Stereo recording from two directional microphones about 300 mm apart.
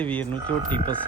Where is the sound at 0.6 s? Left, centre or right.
Centre.